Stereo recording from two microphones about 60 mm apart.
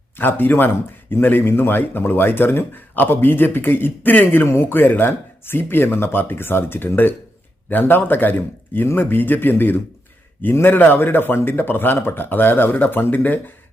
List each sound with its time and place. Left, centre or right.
0.2 s speech: left
4.4 s speech: left
4.7 s speech: left